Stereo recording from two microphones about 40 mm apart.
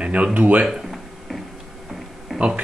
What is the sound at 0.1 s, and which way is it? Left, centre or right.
Speech, right.